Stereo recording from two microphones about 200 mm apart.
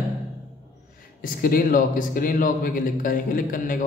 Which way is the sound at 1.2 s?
45° left (ahead or behind).